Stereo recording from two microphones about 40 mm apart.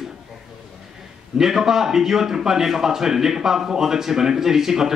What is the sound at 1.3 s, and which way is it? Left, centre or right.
Speech, centre.